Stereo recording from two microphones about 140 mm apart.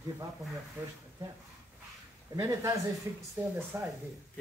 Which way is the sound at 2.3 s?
20° right (ahead or behind).